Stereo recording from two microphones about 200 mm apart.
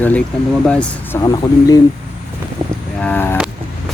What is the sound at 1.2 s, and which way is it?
Speech, 20° left (ahead or behind).